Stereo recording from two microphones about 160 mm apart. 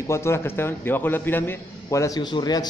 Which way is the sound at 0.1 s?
15° left (ahead or behind).